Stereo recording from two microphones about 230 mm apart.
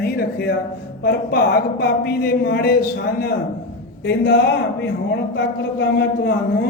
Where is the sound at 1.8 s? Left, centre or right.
Left.